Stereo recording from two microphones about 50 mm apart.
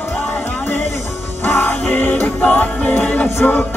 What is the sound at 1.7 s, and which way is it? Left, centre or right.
Music, left.